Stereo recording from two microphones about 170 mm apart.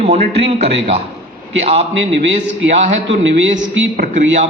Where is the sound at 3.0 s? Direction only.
90° right.